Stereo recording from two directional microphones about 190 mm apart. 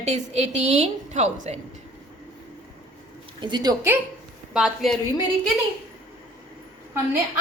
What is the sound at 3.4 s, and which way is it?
Speech, 25° right (ahead or behind).